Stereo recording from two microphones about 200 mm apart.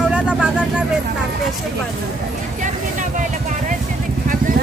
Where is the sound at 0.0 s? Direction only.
5° right (ahead or behind).